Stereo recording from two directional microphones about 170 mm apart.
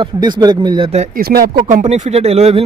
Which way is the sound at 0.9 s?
45° right (ahead or behind).